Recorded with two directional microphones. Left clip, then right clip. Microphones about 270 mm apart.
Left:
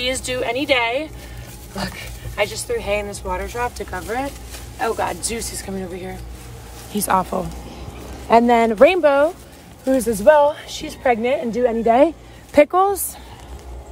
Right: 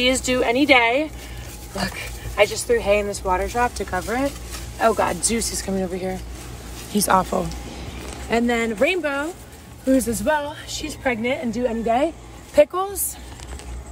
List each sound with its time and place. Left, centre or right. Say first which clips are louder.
0.0 s speech: right 3 dB; centre
2.3 s speech: right 4 dB; centre
6.9 s speech: even; centre